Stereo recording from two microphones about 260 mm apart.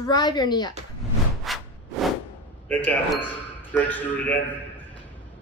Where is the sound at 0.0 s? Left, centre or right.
Centre.